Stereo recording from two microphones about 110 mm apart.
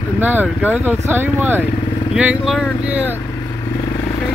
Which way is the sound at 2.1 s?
5° right (ahead or behind).